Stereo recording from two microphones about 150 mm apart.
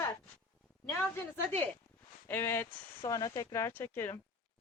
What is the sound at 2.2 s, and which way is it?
Speech, 15° left (ahead or behind).